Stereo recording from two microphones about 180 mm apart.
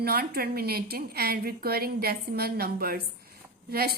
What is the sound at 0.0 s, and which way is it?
A woman's voice, 60° right (ahead or behind).